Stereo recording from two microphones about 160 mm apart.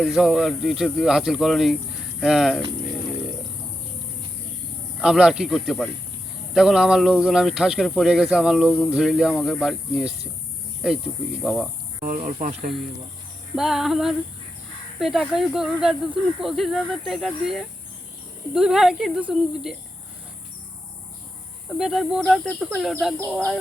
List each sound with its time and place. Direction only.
0.0 s speech: 5° right (ahead or behind)
4.9 s speech: 5° right (ahead or behind)
11.9 s speech: 50° right (ahead or behind)
13.6 s speech: centre (ahead or behind)
21.7 s speech: centre (ahead or behind)